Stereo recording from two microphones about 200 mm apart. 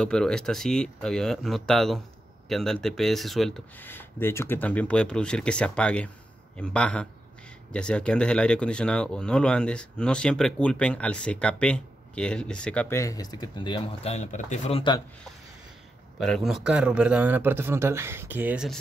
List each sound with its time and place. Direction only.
0.0 s speech: 5° left (ahead or behind); by 14.8 s 35° left (ahead or behind)
16.2 s speech: centre (ahead or behind)